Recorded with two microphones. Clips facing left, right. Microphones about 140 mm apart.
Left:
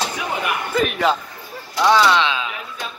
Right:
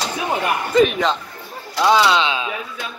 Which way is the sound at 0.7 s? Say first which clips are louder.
Right 3 dB; 5° left (ahead or behind).